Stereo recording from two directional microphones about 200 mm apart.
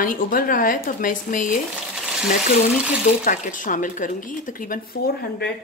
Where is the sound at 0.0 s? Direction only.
45° left (ahead or behind).